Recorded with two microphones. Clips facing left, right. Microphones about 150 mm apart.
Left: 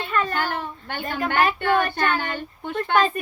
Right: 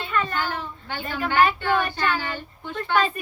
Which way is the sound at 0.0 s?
45° left (ahead or behind).